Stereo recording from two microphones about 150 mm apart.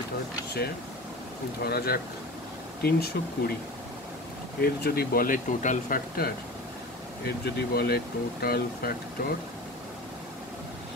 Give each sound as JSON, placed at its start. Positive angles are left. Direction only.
{"t": 1.6, "sound": "speech", "side_deg": 90}
{"t": 4.6, "sound": "speech", "side_deg": 90}
{"t": 7.2, "sound": "speech", "side_deg": 90}